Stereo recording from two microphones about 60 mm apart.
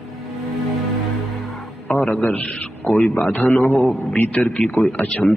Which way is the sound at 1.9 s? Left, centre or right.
Centre.